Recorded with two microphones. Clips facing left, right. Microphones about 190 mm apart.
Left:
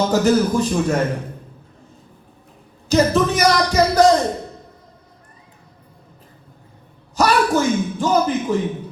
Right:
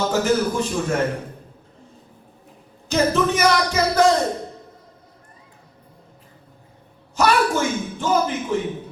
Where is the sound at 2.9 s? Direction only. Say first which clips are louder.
Left 3 dB; 35° left (ahead or behind).